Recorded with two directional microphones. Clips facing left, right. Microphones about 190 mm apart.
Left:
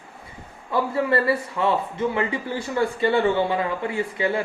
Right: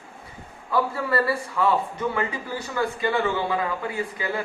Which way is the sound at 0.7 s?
25° left (ahead or behind).